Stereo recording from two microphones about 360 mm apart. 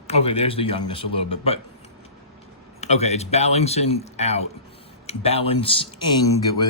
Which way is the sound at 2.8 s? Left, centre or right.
Centre.